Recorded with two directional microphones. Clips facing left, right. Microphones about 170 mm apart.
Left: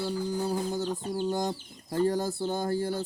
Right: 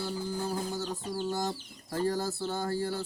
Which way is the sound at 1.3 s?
15° left (ahead or behind).